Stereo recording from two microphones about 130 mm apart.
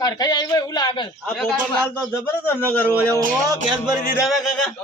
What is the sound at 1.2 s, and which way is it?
Speech, 5° left (ahead or behind).